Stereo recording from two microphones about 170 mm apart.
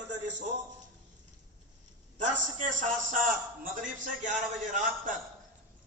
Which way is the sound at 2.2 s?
45° right (ahead or behind).